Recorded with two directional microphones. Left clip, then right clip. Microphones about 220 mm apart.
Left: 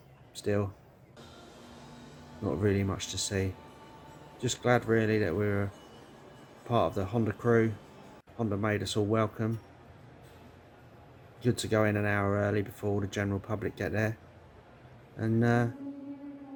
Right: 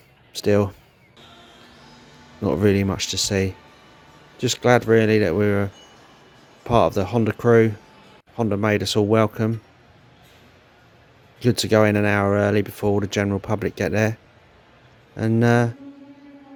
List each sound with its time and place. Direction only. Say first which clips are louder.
0.4 s speech: right 12 dB; 45° right (ahead or behind)
2.4 s speech: right 11 dB; 45° right (ahead or behind)
6.7 s speech: right 11 dB; 45° right (ahead or behind)
11.3 s speech: right 11 dB; 45° right (ahead or behind)